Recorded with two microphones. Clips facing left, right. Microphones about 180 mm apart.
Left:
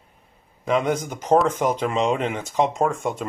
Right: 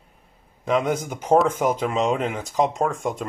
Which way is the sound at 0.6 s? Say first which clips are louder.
Even; centre (ahead or behind).